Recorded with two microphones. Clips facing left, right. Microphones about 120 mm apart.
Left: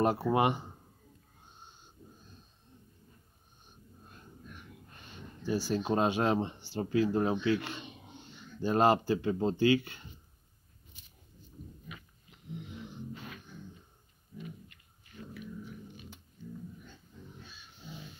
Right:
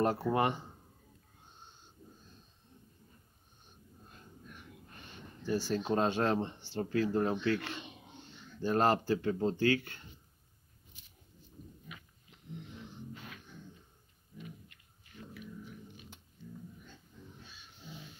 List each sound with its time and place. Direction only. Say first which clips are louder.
0.0 s speech: left 2 dB; 15° left (ahead or behind)
5.4 s speech: left 1 dB; 10° left (ahead or behind)